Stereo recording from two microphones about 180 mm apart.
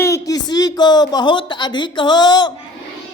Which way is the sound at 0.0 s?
20° left (ahead or behind).